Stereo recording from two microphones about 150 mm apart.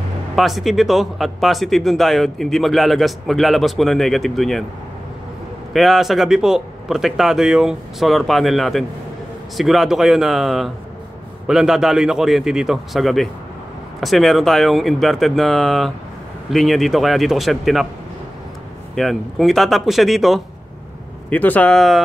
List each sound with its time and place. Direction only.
0.4 s speech: centre (ahead or behind)
5.7 s speech: centre (ahead or behind)
18.9 s speech: centre (ahead or behind)
21.3 s a man's voice: 10° left (ahead or behind)